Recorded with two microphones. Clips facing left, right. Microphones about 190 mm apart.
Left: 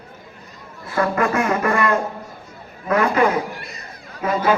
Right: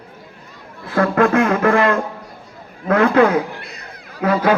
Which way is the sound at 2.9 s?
60° right (ahead or behind).